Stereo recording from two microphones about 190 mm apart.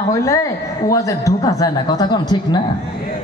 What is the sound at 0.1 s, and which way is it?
Speech, 15° left (ahead or behind).